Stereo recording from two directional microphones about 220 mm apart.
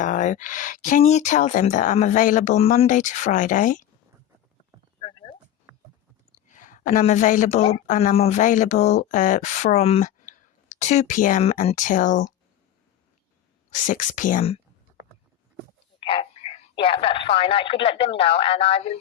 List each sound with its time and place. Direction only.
0.0 s speech: 35° left (ahead or behind)
4.9 s a sound: 25° left (ahead or behind)
5.7 s a sound: 10° right (ahead or behind)
6.5 s speech: 35° left (ahead or behind)
13.7 s speech: 35° left (ahead or behind)
16.0 s speech: 25° left (ahead or behind)